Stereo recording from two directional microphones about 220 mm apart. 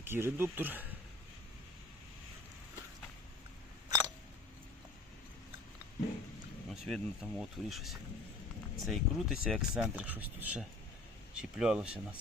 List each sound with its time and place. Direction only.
0.0 s speech: 10° right (ahead or behind)
3.8 s a sound: 15° right (ahead or behind)
6.7 s speech: centre (ahead or behind)